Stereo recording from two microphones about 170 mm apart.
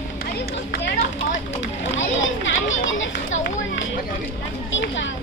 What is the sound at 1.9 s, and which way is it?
Children playing, 90° left.